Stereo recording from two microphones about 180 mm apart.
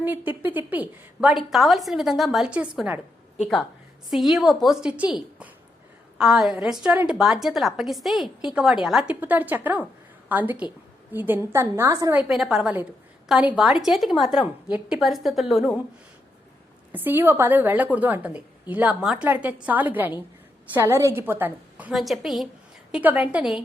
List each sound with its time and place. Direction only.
0.0 s a woman's voice: 10° right (ahead or behind)
4.1 s a woman's voice: centre (ahead or behind); by 12.2 s 15° right (ahead or behind)
12.3 s a woman's voice: centre (ahead or behind)
16.9 s a woman's voice: 10° right (ahead or behind)